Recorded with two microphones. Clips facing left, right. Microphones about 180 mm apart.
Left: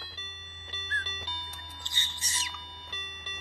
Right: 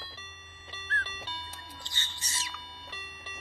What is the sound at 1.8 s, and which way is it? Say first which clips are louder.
Music: even; 20° left (ahead or behind).